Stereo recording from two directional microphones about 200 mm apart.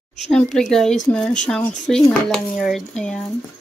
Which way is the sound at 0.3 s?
5° left (ahead or behind).